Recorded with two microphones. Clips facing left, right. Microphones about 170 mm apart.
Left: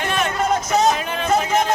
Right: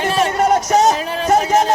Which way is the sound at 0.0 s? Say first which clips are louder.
Right 5 dB; 35° right (ahead or behind).